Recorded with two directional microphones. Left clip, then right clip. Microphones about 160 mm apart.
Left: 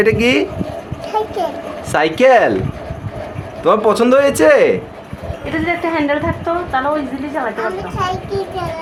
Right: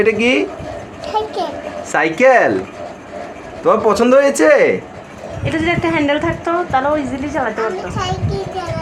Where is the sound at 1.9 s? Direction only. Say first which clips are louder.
Left 1 dB; 25° left (ahead or behind).